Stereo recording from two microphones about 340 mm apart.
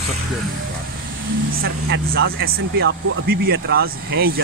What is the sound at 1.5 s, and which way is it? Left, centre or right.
Speech, right.